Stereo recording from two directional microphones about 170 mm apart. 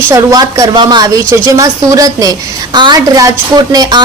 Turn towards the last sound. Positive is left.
turn(degrees=-25)  # may be behind; listen again after turning